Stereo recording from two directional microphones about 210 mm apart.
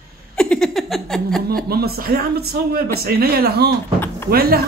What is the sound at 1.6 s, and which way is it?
A man's voice, 45° right (ahead or behind).